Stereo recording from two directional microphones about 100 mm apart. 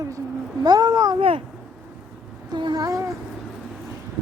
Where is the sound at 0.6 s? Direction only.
40° right (ahead or behind).